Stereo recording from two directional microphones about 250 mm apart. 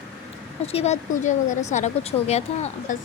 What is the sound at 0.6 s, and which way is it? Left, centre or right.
Speech, left.